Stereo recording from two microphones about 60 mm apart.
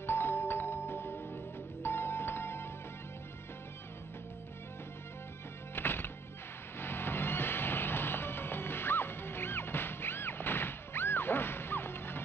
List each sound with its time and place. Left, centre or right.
0.0 s music: left
5.8 s music: left